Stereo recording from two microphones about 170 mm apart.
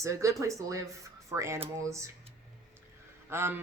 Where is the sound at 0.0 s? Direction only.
20° right (ahead or behind).